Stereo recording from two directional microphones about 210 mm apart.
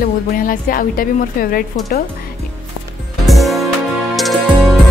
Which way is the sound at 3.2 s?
Centre (ahead or behind).